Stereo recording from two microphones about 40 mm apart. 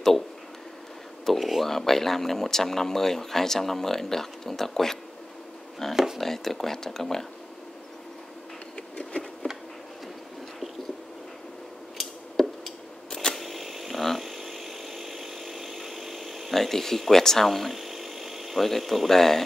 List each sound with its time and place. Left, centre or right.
1.2 s speech: centre
9.4 s insect: left
12.0 s scissors: centre
13.1 s camera: centre
13.4 s a sound: centre
14.0 s chainsaw: centre
16.5 s a sound: centre
18.6 s speech: centre